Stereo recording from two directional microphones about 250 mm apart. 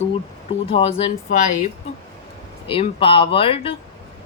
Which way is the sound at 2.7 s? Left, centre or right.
Left.